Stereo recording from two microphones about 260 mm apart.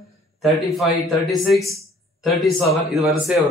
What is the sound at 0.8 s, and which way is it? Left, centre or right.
Speech, centre.